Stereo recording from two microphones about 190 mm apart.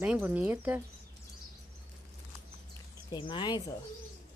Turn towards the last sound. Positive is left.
turn(degrees=25)  # may be behind; listen again after turning